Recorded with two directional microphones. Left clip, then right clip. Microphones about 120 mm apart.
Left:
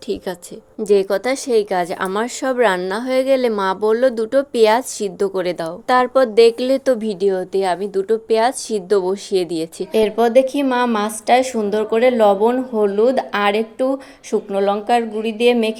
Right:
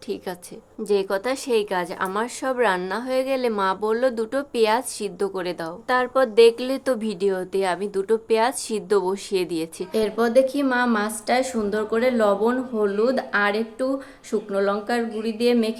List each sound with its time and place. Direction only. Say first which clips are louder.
0.9 s speech: left 6 dB; 40° left (ahead or behind)
1.8 s a woman's voice: left 5 dB; 50° left (ahead or behind); by 15.7 s 35° left (ahead or behind)